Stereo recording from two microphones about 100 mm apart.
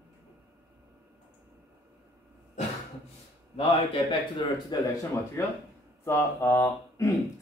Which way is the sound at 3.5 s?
65° left (ahead or behind).